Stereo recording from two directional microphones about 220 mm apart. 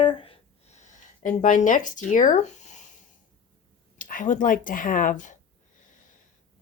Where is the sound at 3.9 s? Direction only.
35° left (ahead or behind).